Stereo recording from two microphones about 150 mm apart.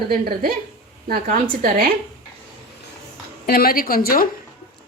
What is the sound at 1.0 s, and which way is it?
Speech, 70° right (ahead or behind).